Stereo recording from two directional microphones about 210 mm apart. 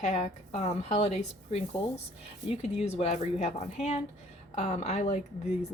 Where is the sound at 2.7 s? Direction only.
30° left (ahead or behind).